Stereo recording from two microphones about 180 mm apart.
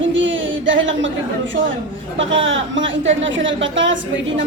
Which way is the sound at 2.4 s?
90° right.